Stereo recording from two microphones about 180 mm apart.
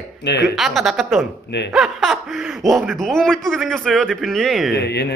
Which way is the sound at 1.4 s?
70° left (ahead or behind).